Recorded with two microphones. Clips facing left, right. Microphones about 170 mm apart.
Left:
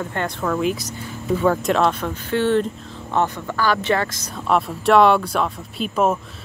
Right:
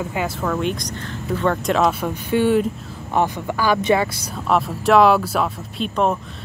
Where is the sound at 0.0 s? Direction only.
5° right (ahead or behind).